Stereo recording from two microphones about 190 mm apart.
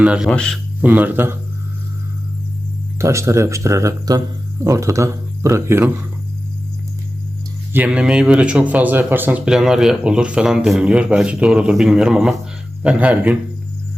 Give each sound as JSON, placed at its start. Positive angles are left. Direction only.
{"t": 0.0, "sound": "speech", "side_deg": -5}
{"t": 0.8, "sound": "speech", "side_deg": -10}
{"t": 3.0, "sound": "speech", "side_deg": -15}
{"t": 7.7, "sound": "speech", "side_deg": -5}